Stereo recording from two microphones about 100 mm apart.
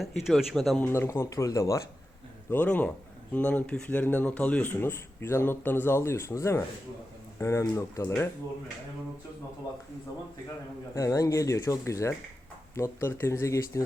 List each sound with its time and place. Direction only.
0.0 s speech: centre (ahead or behind)
0.8 s speech: 25° left (ahead or behind)
2.5 s speech: 15° left (ahead or behind)
10.9 s speech: 30° left (ahead or behind)